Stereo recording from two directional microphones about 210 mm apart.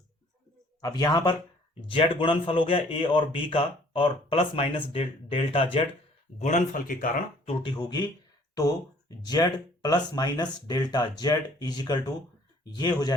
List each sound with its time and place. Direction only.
0.8 s speech: 20° left (ahead or behind)
6.4 s speech: 40° left (ahead or behind)
7.4 s speech: 20° left (ahead or behind)